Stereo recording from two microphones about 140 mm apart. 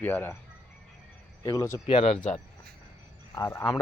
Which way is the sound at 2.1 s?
60° left (ahead or behind).